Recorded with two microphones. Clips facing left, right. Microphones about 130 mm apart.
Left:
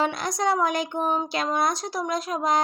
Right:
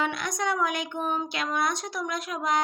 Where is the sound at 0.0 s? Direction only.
35° left (ahead or behind).